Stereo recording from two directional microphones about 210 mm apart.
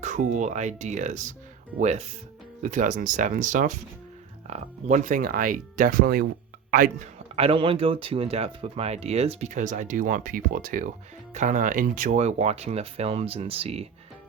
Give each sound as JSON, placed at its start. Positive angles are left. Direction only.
{"t": 0.0, "sound": "speech", "side_deg": -35}
{"t": 7.3, "sound": "speech", "side_deg": -25}